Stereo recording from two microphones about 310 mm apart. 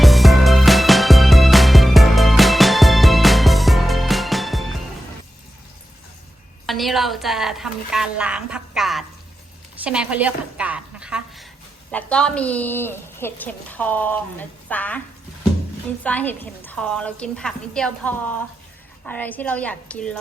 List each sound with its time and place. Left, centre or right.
0.0 s music: centre
6.7 s a woman's voice: centre
16.0 s a woman's voice: centre